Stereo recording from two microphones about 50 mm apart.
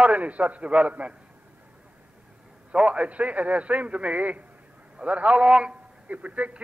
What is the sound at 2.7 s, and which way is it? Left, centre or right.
A man's voice, right.